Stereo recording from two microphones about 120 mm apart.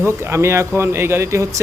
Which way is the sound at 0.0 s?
20° right (ahead or behind).